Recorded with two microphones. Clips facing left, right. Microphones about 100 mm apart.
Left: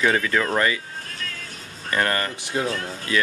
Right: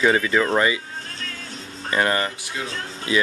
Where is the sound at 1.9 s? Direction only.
15° right (ahead or behind).